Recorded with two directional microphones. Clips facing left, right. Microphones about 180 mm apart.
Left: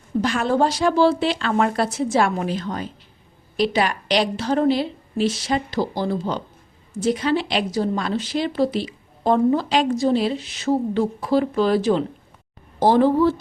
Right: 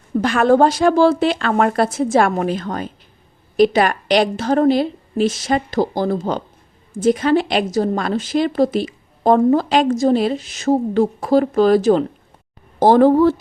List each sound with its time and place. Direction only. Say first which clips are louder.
0.2 s a woman's voice: right 6 dB; 55° right (ahead or behind)